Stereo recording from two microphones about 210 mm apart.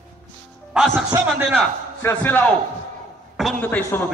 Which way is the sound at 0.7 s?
5° left (ahead or behind).